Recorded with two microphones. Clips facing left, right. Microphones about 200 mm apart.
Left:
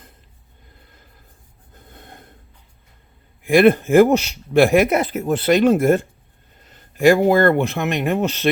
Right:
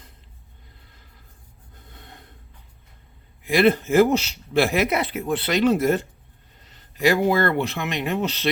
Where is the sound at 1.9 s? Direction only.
50° left (ahead or behind).